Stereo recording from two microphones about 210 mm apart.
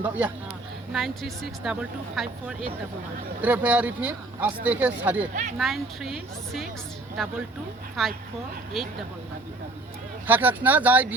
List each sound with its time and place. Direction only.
0.0 s speech: 10° right (ahead or behind)
5.3 s speech: 35° right (ahead or behind)
5.5 s speech: centre (ahead or behind)
8.0 s speech: centre (ahead or behind)
10.2 s speech: 10° right (ahead or behind)